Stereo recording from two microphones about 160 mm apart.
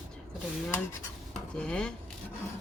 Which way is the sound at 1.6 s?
5° left (ahead or behind).